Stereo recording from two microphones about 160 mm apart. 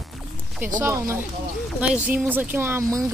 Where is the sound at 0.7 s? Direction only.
15° right (ahead or behind).